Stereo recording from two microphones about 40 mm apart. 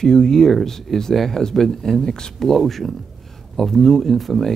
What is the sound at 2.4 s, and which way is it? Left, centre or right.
Speech, centre.